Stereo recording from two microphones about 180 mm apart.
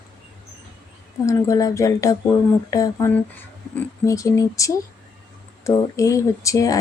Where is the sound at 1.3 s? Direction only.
20° left (ahead or behind).